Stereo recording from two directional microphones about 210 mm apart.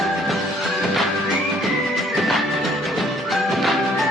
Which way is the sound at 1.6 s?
Centre (ahead or behind).